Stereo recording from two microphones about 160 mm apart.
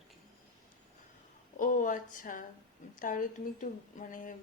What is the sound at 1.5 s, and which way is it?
A woman's voice, 55° left (ahead or behind).